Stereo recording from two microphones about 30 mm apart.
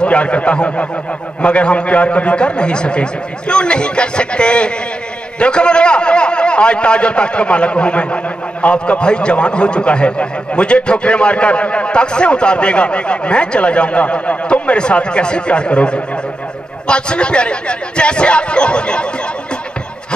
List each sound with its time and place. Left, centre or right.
0.0 s a man's voice: left